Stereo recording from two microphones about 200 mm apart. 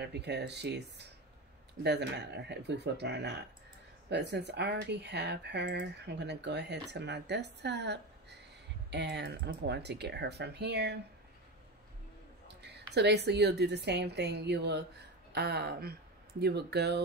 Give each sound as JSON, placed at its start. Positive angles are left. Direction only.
{"t": 0.0, "sound": "speech", "side_deg": -60}
{"t": 12.6, "sound": "speech", "side_deg": -55}